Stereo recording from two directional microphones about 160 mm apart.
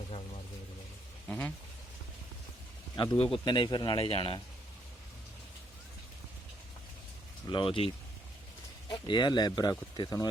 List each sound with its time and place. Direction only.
1.3 s speech: 10° left (ahead or behind)
2.9 s speech: 30° left (ahead or behind)
7.5 s speech: 30° left (ahead or behind)